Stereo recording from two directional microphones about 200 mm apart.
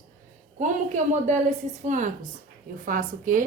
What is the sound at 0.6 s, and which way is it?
A woman's voice, 40° right (ahead or behind).